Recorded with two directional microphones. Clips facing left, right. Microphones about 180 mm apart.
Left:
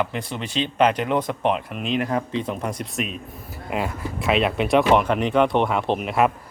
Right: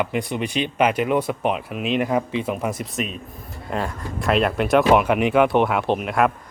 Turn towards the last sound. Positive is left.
turn(degrees=0)  # may be behind; listen again after turning